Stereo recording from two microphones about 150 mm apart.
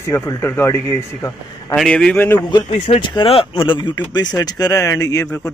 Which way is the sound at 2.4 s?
30° left (ahead or behind).